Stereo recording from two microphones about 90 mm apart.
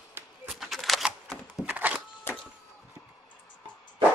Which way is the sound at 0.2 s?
25° right (ahead or behind).